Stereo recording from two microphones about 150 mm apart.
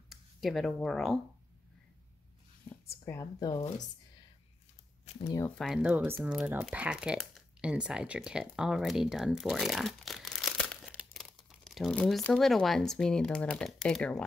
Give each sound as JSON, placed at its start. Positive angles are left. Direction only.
{"t": 0.1, "sound": "speech", "side_deg": 0}
{"t": 3.1, "sound": "speech", "side_deg": 20}
{"t": 5.2, "sound": "speech", "side_deg": 20}
{"t": 5.6, "sound": "speech", "side_deg": -5}